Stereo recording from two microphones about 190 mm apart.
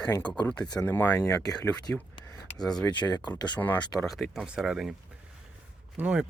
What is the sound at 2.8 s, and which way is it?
Speech, 20° left (ahead or behind).